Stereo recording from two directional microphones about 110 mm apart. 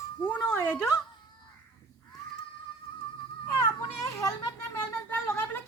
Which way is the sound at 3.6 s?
25° left (ahead or behind).